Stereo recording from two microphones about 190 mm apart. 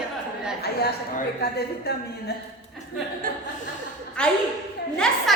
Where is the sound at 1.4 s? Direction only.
55° left (ahead or behind).